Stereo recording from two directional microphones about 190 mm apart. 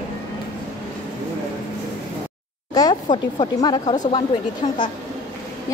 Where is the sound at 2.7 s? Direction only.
20° left (ahead or behind).